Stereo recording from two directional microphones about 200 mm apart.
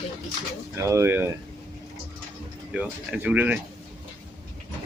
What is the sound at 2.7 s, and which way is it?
Speech, 5° right (ahead or behind).